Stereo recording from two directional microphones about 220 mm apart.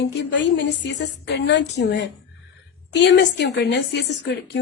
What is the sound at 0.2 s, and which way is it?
Speech, 55° left (ahead or behind).